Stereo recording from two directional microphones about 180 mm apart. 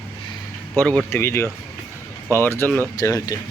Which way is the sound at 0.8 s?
10° left (ahead or behind).